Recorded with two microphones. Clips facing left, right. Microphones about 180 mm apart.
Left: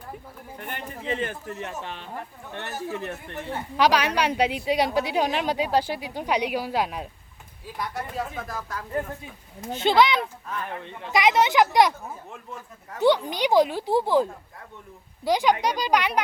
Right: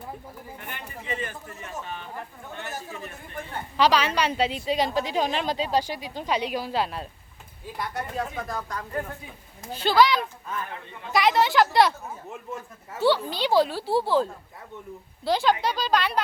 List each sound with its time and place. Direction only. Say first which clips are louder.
1.0 s a man's voice: left 5 dB; 60° left (ahead or behind); by 3.5 s 75° left (ahead or behind)
3.5 s a woman's voice: even; 10° left (ahead or behind)
7.6 s speech: even; centre (ahead or behind)
9.7 s a woman's voice: even; 20° left (ahead or behind)
12.3 s speech: right 3 dB; 5° right (ahead or behind)
13.0 s a woman's voice: left 2 dB; 15° left (ahead or behind)